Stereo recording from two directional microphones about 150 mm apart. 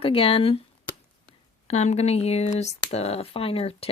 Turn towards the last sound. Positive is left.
turn(degrees=40)  # may be behind; listen again after turning